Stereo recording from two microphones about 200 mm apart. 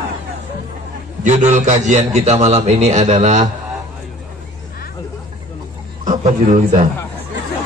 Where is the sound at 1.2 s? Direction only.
35° right (ahead or behind).